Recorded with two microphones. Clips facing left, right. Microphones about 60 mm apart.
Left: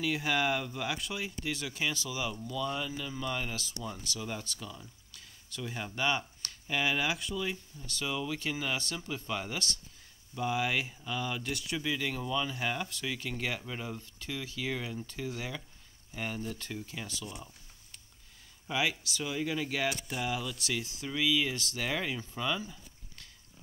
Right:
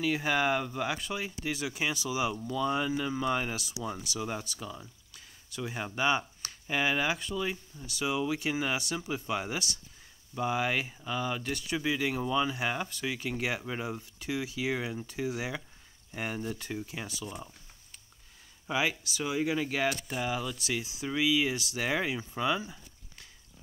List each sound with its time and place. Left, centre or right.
0.0 s speech: centre; by 3.5 s right
3.5 s speech: centre
5.1 s speech: centre
18.7 s speech: centre
22.3 s a sound: centre